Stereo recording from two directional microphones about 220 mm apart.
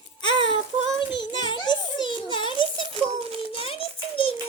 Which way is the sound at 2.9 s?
25° right (ahead or behind).